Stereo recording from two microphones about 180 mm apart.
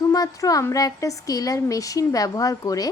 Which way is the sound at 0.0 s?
20° left (ahead or behind).